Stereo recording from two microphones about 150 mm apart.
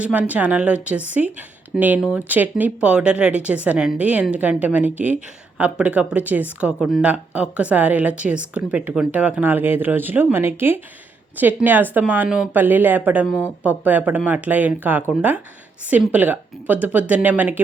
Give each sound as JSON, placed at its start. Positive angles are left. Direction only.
{"t": 0.0, "sound": "a woman's voice", "side_deg": -10}